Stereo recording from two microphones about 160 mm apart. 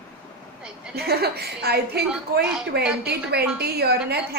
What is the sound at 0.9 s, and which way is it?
A woman's voice, 85° right.